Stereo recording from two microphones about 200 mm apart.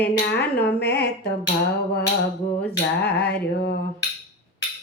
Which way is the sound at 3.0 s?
55° left (ahead or behind).